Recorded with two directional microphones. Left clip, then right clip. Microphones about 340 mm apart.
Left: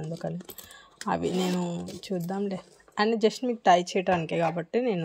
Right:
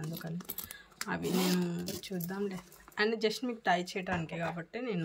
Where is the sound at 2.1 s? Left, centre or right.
Left.